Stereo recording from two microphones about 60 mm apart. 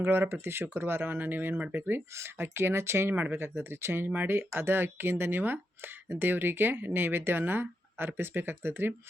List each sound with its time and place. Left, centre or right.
0.0 s speech: right